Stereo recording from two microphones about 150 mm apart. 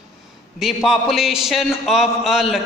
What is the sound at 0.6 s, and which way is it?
A man's voice, centre (ahead or behind).